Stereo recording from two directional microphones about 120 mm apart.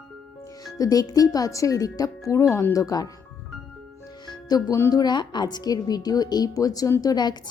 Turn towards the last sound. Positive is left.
turn(degrees=35)  # may be behind; listen again after turning